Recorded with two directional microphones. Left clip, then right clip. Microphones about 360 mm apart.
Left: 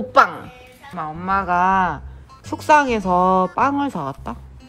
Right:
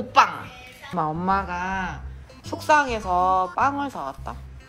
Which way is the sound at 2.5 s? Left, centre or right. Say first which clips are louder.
Left 5 dB; centre.